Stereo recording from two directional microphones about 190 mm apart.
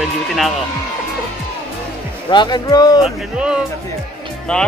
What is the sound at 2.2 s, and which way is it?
Speech, 25° left (ahead or behind).